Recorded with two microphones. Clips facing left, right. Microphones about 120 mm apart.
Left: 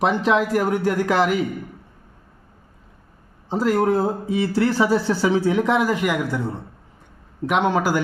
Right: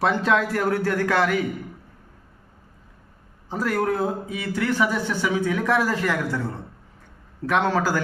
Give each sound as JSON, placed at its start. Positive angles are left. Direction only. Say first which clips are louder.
{"t": 0.0, "sound": "speech", "louder": "left 2 dB", "side_deg": 20}
{"t": 3.5, "sound": "a man's voice", "louder": "left 5 dB", "side_deg": 25}